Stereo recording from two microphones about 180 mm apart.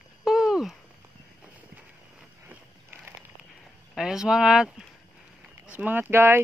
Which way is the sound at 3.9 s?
5° right (ahead or behind).